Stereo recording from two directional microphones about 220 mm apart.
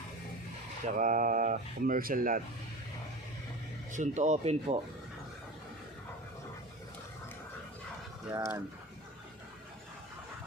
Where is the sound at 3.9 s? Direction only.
35° right (ahead or behind).